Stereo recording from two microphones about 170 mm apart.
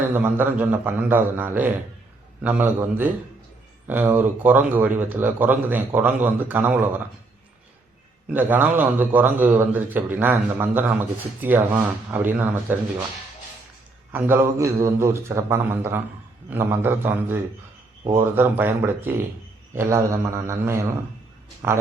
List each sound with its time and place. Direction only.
0.1 s speech: 10° right (ahead or behind)
8.3 s speech: 10° right (ahead or behind)
14.1 s speech: 10° right (ahead or behind)